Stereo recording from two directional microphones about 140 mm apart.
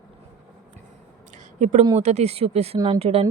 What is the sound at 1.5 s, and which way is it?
A woman's voice, 60° right (ahead or behind).